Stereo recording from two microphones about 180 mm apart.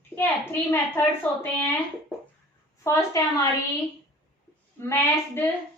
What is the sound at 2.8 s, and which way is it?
Speech, 15° left (ahead or behind).